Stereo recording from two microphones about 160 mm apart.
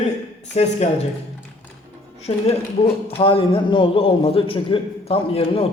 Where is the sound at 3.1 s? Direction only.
35° left (ahead or behind).